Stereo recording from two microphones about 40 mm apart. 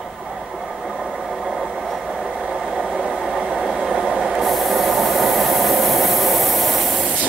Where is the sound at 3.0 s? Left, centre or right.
Right.